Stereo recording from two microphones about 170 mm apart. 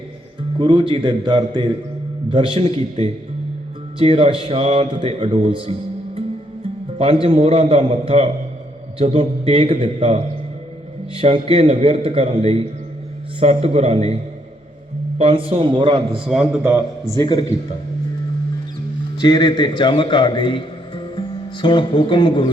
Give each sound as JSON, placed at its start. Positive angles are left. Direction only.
{"t": 0.6, "sound": "a man's voice", "side_deg": -25}
{"t": 7.0, "sound": "speech", "side_deg": -35}
{"t": 15.2, "sound": "speech", "side_deg": -35}
{"t": 16.2, "sound": "a man's voice", "side_deg": -5}
{"t": 17.2, "sound": "a man's voice", "side_deg": 20}
{"t": 19.2, "sound": "a man's voice", "side_deg": 25}